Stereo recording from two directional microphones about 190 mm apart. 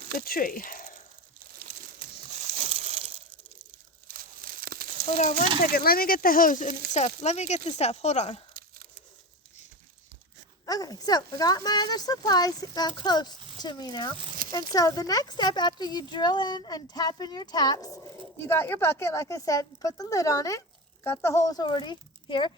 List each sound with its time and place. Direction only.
0.2 s speech: 50° left (ahead or behind)
1.6 s crumpling: 40° right (ahead or behind)
4.1 s tearing: 50° right (ahead or behind)
5.1 s speech: 40° left (ahead or behind)
5.5 s speech: 50° left (ahead or behind); by 8.4 s 35° left (ahead or behind)
10.7 s speech: 20° left (ahead or behind)